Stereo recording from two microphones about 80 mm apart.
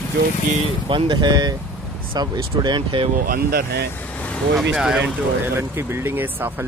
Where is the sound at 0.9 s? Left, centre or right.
Right.